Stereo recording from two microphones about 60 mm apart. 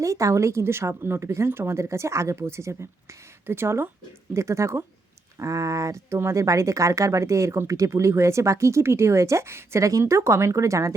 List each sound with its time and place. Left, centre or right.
0.0 s speech: right
4.4 s speech: right
5.4 s speech: right